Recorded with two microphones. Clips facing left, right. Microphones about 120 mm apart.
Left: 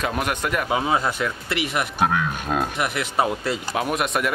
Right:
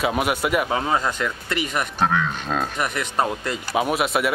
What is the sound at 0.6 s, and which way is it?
Speech, 10° left (ahead or behind).